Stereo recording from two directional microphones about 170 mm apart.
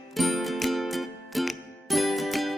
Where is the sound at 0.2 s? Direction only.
Centre (ahead or behind).